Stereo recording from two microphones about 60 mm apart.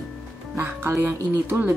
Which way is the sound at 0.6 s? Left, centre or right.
Right.